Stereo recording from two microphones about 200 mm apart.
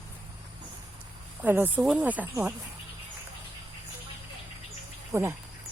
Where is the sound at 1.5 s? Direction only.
10° right (ahead or behind).